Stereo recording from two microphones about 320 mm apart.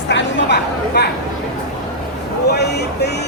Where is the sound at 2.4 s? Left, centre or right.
Left.